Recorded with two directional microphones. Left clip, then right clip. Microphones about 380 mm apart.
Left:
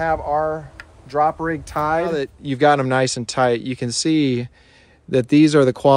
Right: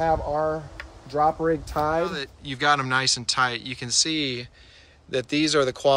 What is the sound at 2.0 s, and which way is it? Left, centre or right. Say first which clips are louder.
Speech: left 6 dB; centre.